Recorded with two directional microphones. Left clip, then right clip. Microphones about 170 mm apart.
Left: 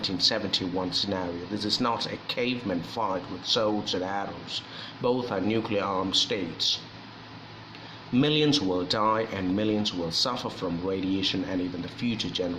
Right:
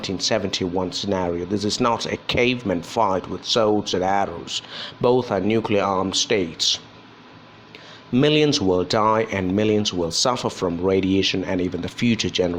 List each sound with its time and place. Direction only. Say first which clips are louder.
0.0 s speech: right 3 dB; 40° right (ahead or behind)
8.1 s speech: right 6 dB; 40° right (ahead or behind)